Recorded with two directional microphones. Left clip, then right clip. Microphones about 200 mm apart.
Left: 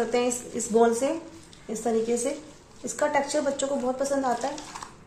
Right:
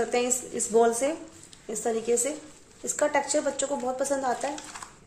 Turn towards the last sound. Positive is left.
turn(degrees=-40)  # may be behind; listen again after turning